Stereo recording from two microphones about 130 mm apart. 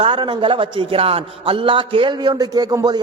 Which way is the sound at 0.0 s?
40° right (ahead or behind).